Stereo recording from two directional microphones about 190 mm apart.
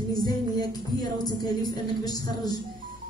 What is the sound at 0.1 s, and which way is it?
Music, 20° left (ahead or behind).